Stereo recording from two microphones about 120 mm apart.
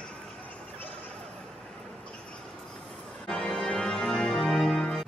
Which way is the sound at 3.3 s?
5° left (ahead or behind).